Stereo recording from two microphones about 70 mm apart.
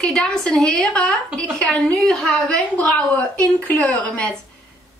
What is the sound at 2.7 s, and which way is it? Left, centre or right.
Speech, centre.